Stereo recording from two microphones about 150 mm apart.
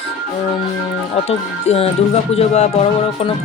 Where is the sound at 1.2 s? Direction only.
45° left (ahead or behind).